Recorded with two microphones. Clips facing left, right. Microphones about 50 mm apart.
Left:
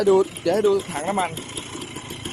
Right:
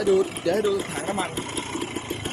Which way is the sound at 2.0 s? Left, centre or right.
Right.